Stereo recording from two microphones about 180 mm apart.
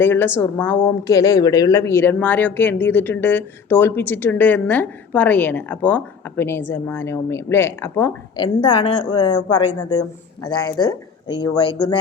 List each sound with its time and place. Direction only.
0.0 s speech: 10° left (ahead or behind)
8.4 s speech: 25° left (ahead or behind)